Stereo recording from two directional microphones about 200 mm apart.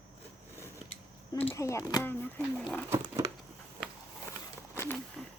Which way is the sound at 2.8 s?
15° right (ahead or behind).